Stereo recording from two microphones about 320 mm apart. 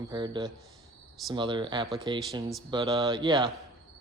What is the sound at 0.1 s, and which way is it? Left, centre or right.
A man's voice, centre.